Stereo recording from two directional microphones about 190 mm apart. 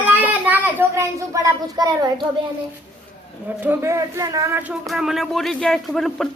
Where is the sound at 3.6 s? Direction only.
10° right (ahead or behind).